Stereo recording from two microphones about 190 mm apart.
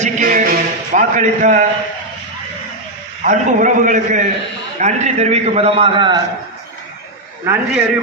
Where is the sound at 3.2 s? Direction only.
40° right (ahead or behind); by 6.2 s 25° right (ahead or behind).